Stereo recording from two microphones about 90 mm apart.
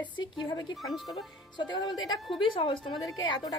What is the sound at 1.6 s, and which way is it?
Speech, 55° left (ahead or behind).